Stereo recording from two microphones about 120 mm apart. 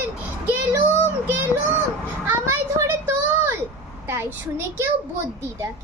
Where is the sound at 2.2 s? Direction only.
20° right (ahead or behind).